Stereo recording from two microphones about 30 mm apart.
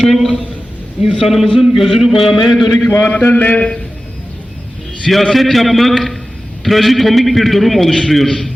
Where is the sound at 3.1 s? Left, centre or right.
Left.